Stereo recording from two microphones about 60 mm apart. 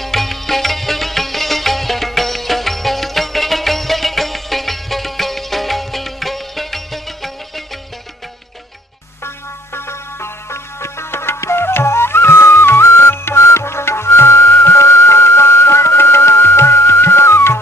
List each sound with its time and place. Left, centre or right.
0.0 s music: centre
9.7 s music: left